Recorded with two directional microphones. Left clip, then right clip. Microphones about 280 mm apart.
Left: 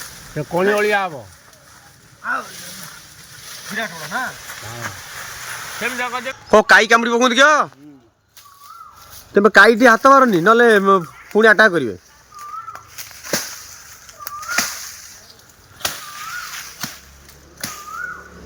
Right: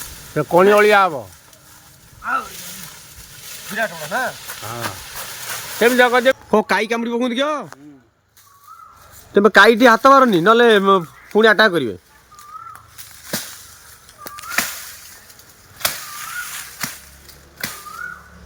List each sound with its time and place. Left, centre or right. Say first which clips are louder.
0.3 s speech: right 5 dB; centre
2.2 s speech: right 1 dB; centre
3.7 s speech: right 3 dB; centre
6.5 s speech: left 7 dB; centre
9.3 s speech: even; centre
12.7 s a sound: left 5 dB; left